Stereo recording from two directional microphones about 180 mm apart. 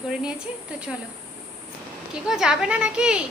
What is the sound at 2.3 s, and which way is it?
Speech, 5° right (ahead or behind).